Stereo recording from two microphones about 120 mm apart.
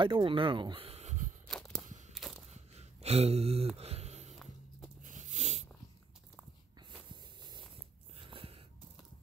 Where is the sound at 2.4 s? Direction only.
65° right (ahead or behind).